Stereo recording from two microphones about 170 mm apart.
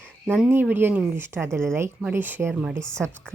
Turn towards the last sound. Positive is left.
turn(degrees=-15)  # may be behind; listen again after turning